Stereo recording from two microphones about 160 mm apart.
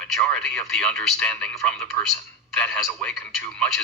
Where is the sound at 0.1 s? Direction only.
5° left (ahead or behind).